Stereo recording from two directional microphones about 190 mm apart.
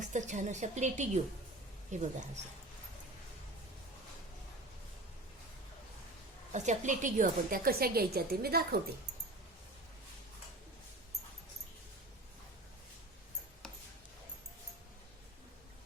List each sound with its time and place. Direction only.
0.0 s a woman's voice: 40° right (ahead or behind)
6.5 s a woman's voice: 40° right (ahead or behind); by 8.8 s 55° right (ahead or behind)